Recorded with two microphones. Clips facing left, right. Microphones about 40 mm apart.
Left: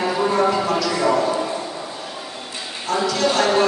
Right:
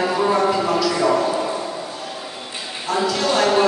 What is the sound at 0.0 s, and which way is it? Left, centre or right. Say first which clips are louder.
Music: right 1 dB; centre.